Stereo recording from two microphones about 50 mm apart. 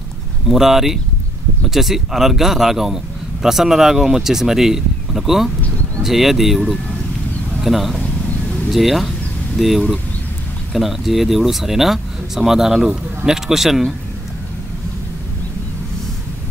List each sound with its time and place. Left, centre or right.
0.5 s speech: centre
8.0 s a sound: left
8.6 s speech: centre